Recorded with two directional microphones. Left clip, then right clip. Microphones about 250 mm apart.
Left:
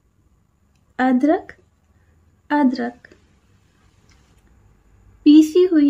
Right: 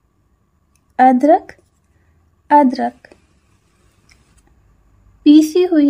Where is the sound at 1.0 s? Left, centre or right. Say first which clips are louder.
Right 8 dB; centre.